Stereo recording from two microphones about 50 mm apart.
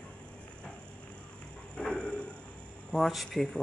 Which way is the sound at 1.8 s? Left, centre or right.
Centre.